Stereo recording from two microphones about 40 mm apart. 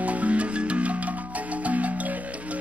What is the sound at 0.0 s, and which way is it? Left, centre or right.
Music, right.